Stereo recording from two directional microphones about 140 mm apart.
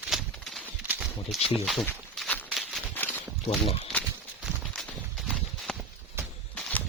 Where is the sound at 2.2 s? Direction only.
10° left (ahead or behind).